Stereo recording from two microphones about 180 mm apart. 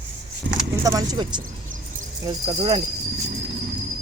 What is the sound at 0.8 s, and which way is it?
Speech, 20° right (ahead or behind).